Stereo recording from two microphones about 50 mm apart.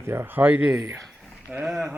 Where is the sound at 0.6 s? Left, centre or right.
Right.